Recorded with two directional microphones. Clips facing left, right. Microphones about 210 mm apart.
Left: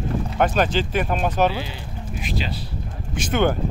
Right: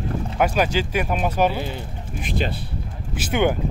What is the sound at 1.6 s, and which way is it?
Speech, 50° right (ahead or behind).